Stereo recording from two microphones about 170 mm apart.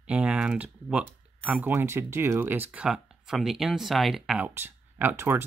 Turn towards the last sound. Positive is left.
turn(degrees=-15)  # may be behind; listen again after turning